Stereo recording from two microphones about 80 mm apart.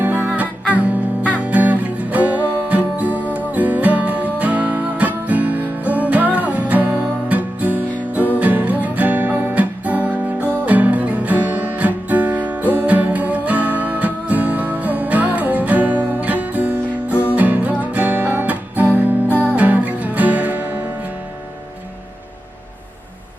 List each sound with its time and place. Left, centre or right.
0.0 s music: right
19.3 s music: left
19.5 s music: centre